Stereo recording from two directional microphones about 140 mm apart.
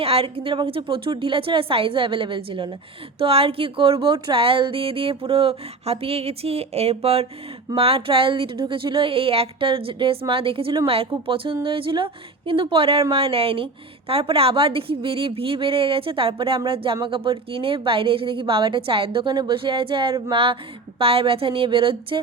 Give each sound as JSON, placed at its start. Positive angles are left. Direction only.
{"t": 0.0, "sound": "speech", "side_deg": -45}